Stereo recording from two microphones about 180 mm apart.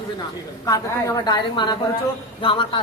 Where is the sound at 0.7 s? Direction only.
20° left (ahead or behind).